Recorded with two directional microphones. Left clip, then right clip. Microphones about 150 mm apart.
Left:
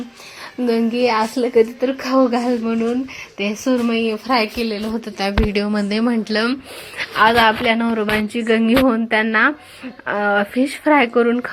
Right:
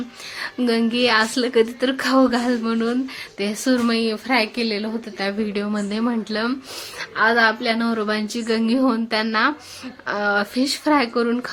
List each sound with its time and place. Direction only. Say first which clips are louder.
0.6 s speech: left 2 dB; 5° left (ahead or behind)
2.1 s speech: left 2 dB; 10° right (ahead or behind)
2.4 s speech: left 2 dB; 10° left (ahead or behind)
3.6 s speech: left 1 dB; 10° right (ahead or behind)
4.0 s speech: left 2 dB; 10° left (ahead or behind)
4.9 s speech: left 4 dB; 25° left (ahead or behind); by 11.5 s 5° left (ahead or behind)